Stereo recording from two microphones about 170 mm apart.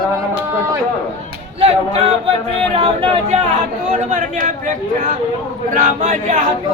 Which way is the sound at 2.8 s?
35° right (ahead or behind).